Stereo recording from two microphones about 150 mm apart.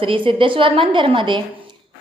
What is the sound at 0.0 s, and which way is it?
A woman's voice, 35° right (ahead or behind).